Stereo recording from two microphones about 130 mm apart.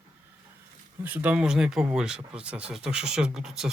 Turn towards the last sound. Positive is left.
turn(degrees=-5)  # may be behind; listen again after turning